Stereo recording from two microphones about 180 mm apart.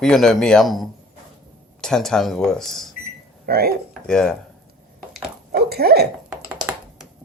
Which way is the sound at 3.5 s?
60° right (ahead or behind).